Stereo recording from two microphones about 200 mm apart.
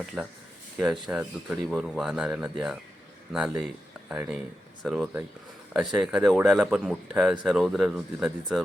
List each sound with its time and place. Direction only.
0.2 s speech: centre (ahead or behind)